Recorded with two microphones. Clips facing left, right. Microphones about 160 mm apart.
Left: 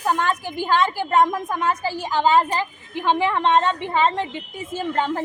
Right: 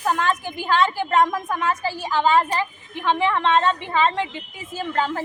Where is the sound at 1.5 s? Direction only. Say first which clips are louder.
Left 1 dB; 15° left (ahead or behind).